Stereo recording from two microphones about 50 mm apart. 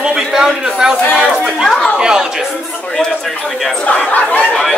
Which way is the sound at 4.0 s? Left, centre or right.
Left.